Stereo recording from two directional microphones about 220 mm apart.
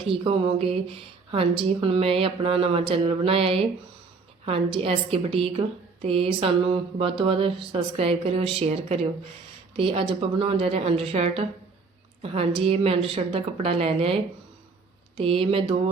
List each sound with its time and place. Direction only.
0.0 s a woman's voice: 25° right (ahead or behind)